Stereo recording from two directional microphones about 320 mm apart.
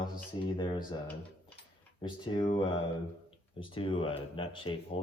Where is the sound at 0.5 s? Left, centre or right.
Centre.